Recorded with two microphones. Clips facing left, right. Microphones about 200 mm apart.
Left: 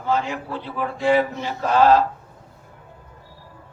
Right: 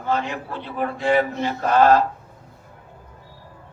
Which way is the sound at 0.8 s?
55° right (ahead or behind).